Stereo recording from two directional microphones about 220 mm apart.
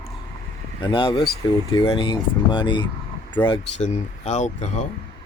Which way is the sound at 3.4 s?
30° left (ahead or behind).